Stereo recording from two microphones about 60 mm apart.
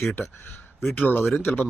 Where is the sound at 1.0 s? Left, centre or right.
Left.